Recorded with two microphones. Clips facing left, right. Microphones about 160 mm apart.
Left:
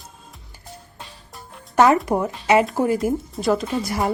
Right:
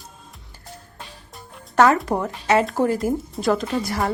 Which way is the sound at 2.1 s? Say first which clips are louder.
Left 2 dB; centre (ahead or behind).